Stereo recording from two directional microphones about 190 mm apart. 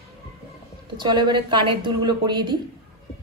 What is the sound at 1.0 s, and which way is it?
Speech, 25° right (ahead or behind).